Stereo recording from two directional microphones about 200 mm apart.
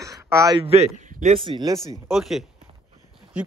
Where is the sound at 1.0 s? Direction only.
35° right (ahead or behind).